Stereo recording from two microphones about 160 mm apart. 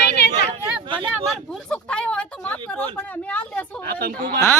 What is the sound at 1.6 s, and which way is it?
A woman's voice, 5° left (ahead or behind).